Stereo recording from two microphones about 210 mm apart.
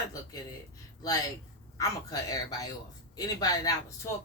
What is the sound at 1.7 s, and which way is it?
Speech, 15° left (ahead or behind).